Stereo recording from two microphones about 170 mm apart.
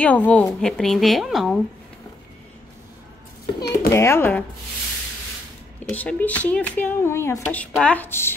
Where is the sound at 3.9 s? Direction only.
15° left (ahead or behind).